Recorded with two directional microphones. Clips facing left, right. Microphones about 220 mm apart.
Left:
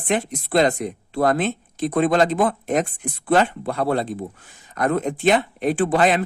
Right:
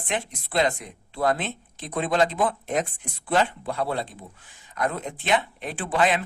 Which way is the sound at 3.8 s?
45° left (ahead or behind).